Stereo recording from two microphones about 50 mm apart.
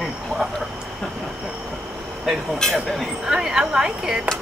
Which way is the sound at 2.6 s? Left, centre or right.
Centre.